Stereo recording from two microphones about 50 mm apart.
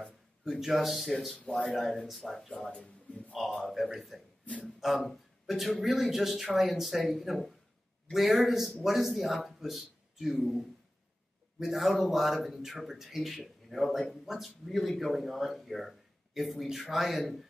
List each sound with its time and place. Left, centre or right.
0.5 s speech: centre
2.7 s a sound: left
3.3 s a man's voice: centre
11.6 s speech: centre